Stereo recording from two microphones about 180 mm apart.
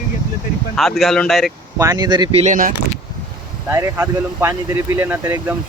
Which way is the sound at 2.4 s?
45° right (ahead or behind).